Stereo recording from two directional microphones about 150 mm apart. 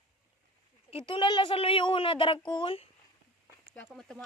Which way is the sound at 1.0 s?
35° left (ahead or behind).